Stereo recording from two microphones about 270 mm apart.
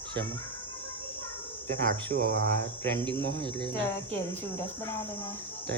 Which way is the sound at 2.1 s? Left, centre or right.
Right.